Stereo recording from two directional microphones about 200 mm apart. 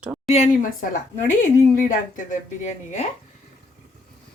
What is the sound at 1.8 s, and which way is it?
Speech, 40° left (ahead or behind).